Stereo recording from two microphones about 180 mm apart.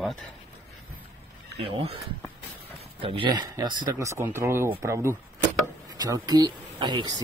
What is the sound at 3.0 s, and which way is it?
Speech, 30° right (ahead or behind).